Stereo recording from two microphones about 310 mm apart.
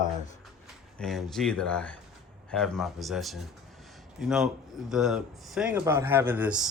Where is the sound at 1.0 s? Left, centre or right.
Centre.